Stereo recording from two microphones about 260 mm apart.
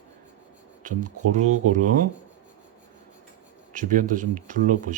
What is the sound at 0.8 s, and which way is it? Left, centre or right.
Speech, right.